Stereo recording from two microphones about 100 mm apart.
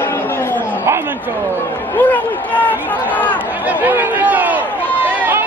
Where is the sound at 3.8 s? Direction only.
15° right (ahead or behind).